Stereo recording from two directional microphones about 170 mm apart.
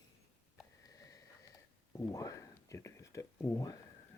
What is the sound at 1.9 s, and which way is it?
Speech, 20° left (ahead or behind).